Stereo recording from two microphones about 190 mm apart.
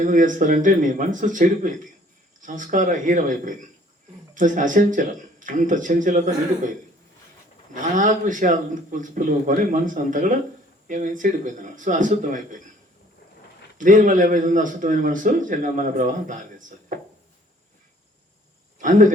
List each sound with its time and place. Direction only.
0.0 s a man's voice: 45° right (ahead or behind)
7.7 s a man's voice: 40° right (ahead or behind)
13.7 s a man's voice: 45° right (ahead or behind)
18.8 s speech: 45° right (ahead or behind)